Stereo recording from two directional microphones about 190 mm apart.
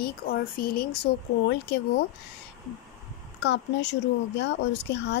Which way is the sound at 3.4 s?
65° left (ahead or behind).